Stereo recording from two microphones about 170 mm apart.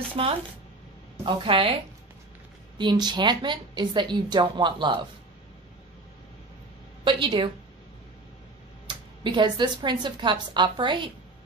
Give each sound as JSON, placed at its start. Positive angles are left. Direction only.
{"t": 0.1, "sound": "a woman's voice", "side_deg": -35}
{"t": 2.8, "sound": "speech", "side_deg": -25}
{"t": 7.1, "sound": "speech", "side_deg": -30}
{"t": 8.8, "sound": "speech", "side_deg": -30}